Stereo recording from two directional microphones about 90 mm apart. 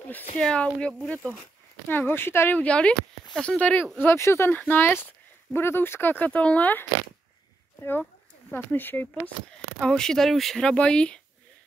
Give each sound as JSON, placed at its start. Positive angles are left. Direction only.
{"t": 0.4, "sound": "speech", "side_deg": 10}
{"t": 8.5, "sound": "speech", "side_deg": 20}
{"t": 9.1, "sound": "speech", "side_deg": 10}